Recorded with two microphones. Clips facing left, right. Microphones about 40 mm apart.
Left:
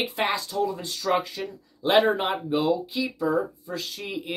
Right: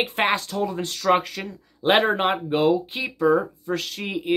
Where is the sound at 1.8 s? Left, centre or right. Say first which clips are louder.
Right 2 dB; right.